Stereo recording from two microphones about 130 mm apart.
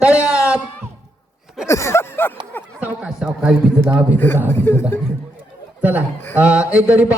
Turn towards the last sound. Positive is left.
turn(degrees=-10)  # may be behind; listen again after turning